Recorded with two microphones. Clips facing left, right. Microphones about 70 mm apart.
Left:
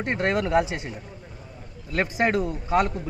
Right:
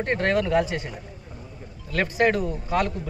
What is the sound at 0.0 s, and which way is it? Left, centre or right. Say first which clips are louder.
A man's voice: right 1 dB; centre.